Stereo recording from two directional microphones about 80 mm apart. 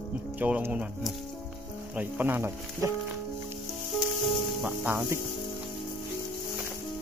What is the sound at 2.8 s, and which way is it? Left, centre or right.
Music, right.